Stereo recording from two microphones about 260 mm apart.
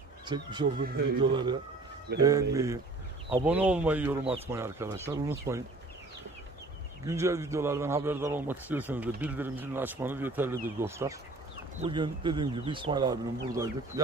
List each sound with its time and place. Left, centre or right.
0.2 s a man's voice: centre
2.1 s speech: right
2.5 s a man's voice: centre
7.1 s a man's voice: centre